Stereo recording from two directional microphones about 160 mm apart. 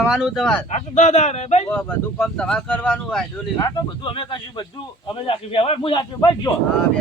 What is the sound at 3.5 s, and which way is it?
A man's voice, 30° left (ahead or behind).